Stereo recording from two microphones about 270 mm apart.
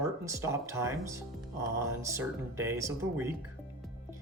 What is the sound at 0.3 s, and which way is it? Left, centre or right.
Speech, centre.